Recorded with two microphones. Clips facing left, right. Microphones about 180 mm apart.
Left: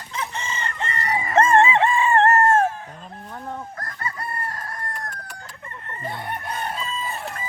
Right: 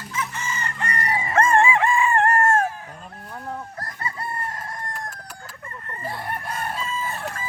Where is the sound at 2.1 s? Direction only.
30° left (ahead or behind).